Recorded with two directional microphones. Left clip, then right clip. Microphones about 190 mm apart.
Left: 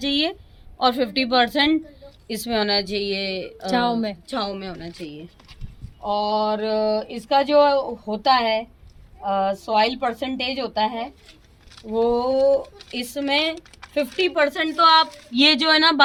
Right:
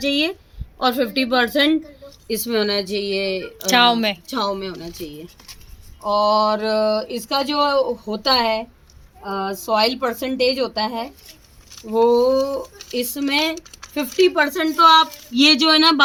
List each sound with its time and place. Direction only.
0.0 s speech: 35° left (ahead or behind)
3.7 s speech: 5° left (ahead or behind)
4.3 s a woman's voice: 25° left (ahead or behind); by 16.0 s centre (ahead or behind)